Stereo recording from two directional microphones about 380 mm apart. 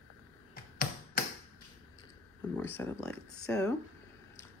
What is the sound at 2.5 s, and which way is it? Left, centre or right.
Speech, centre.